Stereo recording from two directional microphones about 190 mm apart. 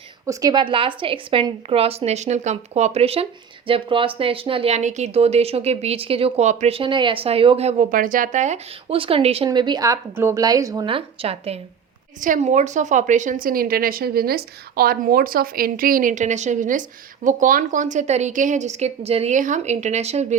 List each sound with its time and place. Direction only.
0.3 s a woman's voice: 20° right (ahead or behind); by 20.2 s 35° right (ahead or behind)